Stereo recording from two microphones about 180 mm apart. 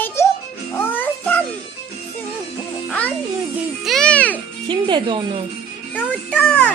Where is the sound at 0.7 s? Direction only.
10° left (ahead or behind).